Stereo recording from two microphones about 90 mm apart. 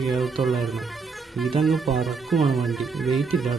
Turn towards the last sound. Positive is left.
turn(degrees=0)  # may be behind; listen again after turning